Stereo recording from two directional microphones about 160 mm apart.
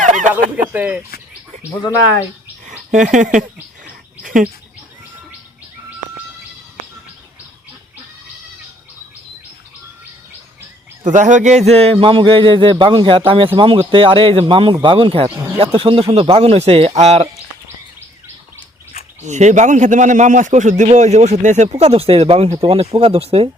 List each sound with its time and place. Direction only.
0.0 s a sound: 50° right (ahead or behind)
0.7 s speech: 10° right (ahead or behind)
2.6 s speech: 50° right (ahead or behind)
3.8 s bird: 55° right (ahead or behind)
11.0 s speech: 50° right (ahead or behind)
19.2 s a man's voice: 50° right (ahead or behind)